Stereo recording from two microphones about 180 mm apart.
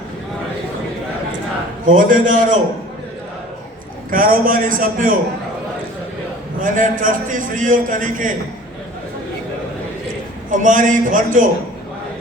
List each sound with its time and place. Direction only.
1.8 s a man's voice: 50° right (ahead or behind)
4.1 s a man's voice: 50° right (ahead or behind)
6.6 s a man's voice: 50° right (ahead or behind)
10.5 s a man's voice: 45° right (ahead or behind)